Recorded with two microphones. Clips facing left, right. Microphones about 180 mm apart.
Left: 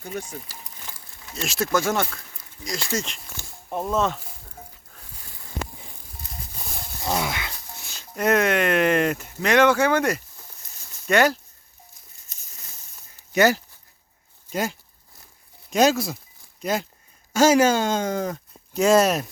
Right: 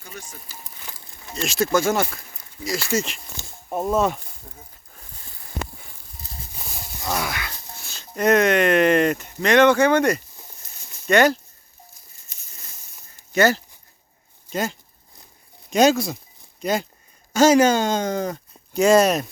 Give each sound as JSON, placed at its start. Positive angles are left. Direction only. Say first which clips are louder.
{"t": 0.0, "sound": "speech", "louder": "left 8 dB", "side_deg": 55}
{"t": 1.5, "sound": "speech", "louder": "right 3 dB", "side_deg": 0}
{"t": 6.6, "sound": "livestock", "louder": "even", "side_deg": 0}
{"t": 7.0, "sound": "a sound", "louder": "left 1 dB", "side_deg": 20}
{"t": 8.1, "sound": "speech", "louder": "right 3 dB", "side_deg": 5}
{"t": 13.3, "sound": "speech", "louder": "even", "side_deg": 15}